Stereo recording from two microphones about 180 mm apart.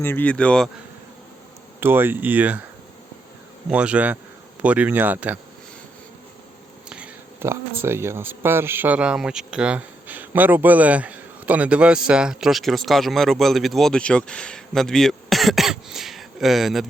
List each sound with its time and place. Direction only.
0.0 s speech: 10° left (ahead or behind)
1.8 s speech: 10° right (ahead or behind)
3.7 s speech: 5° right (ahead or behind)
6.9 s speech: 10° right (ahead or behind)